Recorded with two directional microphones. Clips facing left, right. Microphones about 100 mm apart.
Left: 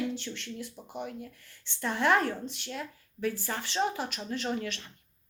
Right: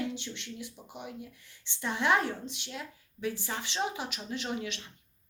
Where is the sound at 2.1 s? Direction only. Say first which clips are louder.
Left 2 dB; 50° left (ahead or behind).